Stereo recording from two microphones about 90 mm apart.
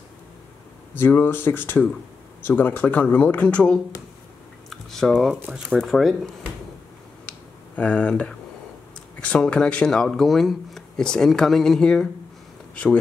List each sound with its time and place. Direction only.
0.9 s speech: 25° left (ahead or behind); by 6.3 s centre (ahead or behind)
7.2 s a sound: 15° left (ahead or behind)
9.2 s speech: 10° left (ahead or behind)